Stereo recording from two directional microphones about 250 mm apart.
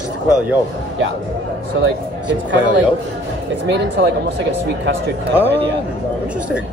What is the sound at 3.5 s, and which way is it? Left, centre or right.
Speech, right.